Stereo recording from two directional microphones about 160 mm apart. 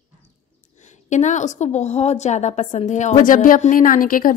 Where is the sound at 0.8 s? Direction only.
50° left (ahead or behind).